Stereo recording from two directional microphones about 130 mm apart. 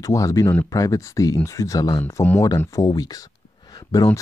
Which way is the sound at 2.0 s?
15° left (ahead or behind).